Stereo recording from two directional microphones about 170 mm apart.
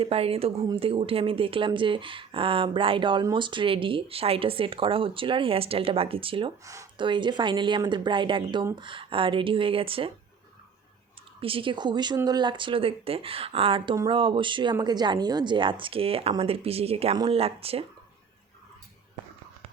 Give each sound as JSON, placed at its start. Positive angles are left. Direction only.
{"t": 0.0, "sound": "speech", "side_deg": -35}
{"t": 11.3, "sound": "speech", "side_deg": -30}